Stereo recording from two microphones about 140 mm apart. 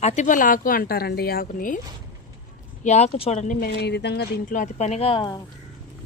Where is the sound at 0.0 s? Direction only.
55° left (ahead or behind); by 1.8 s 80° left.